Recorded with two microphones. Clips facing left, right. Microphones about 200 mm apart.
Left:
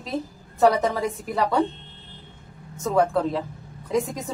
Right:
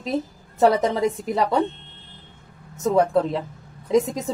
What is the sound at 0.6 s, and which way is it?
A woman's voice, 25° right (ahead or behind).